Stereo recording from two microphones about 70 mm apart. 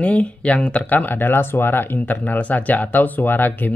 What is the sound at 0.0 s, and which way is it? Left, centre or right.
Speech, centre.